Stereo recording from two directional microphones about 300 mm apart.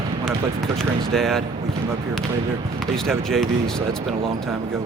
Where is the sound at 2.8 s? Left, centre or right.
Centre.